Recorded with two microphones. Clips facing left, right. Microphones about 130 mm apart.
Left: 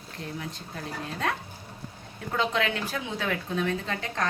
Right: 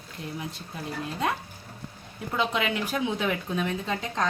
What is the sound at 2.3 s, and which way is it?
Speech, 15° right (ahead or behind).